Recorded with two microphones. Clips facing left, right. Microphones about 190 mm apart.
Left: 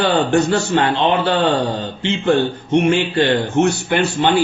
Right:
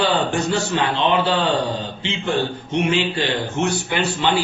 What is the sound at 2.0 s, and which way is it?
A man's voice, 55° left (ahead or behind).